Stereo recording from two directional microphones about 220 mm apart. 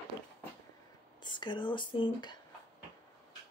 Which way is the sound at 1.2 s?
20° left (ahead or behind).